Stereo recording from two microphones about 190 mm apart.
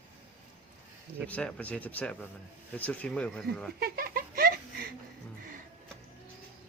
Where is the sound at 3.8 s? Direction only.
50° right (ahead or behind).